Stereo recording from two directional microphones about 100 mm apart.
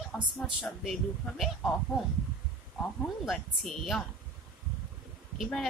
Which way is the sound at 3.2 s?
Centre (ahead or behind).